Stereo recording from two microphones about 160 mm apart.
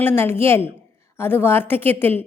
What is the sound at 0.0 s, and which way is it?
A woman's voice, 15° left (ahead or behind).